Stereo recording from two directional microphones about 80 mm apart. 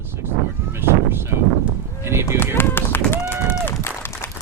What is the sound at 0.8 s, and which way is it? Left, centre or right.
Speech, right.